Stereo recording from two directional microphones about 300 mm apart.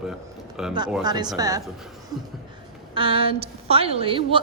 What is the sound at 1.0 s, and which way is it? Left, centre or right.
Speech, centre.